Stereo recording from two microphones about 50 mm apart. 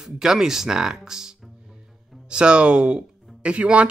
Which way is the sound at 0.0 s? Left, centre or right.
Centre.